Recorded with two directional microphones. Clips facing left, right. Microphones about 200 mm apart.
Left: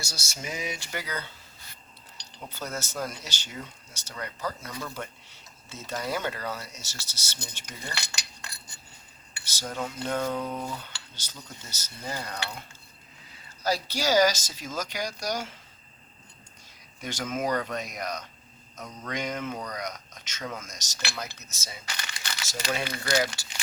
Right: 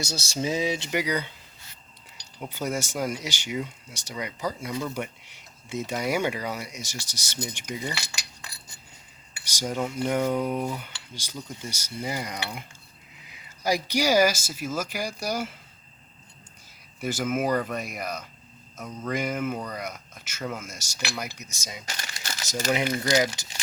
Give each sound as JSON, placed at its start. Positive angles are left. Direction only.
{"t": 0.0, "sound": "speech", "side_deg": -30}
{"t": 0.9, "sound": "cutlery", "side_deg": -15}
{"t": 9.3, "sound": "cutlery", "side_deg": -15}
{"t": 17.0, "sound": "cutlery", "side_deg": -5}
{"t": 21.8, "sound": "crumpling", "side_deg": -40}
{"t": 22.7, "sound": "cutlery", "side_deg": -20}